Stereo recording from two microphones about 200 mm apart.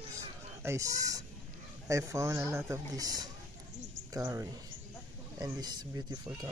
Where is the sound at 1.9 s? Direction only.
15° right (ahead or behind).